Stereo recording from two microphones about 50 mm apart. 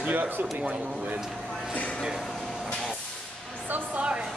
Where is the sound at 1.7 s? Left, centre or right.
Left.